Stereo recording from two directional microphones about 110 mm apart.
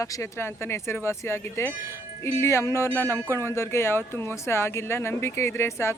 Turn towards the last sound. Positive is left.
turn(degrees=25)  # may be behind; listen again after turning